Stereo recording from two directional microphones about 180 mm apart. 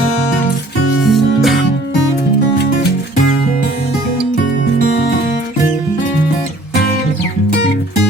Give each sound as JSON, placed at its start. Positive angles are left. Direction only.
{"t": 1.0, "sound": "music", "side_deg": 0}